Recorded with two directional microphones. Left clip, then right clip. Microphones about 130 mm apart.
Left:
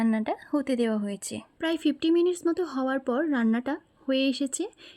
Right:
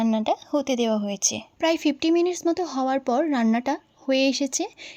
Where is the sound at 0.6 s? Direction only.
45° left (ahead or behind).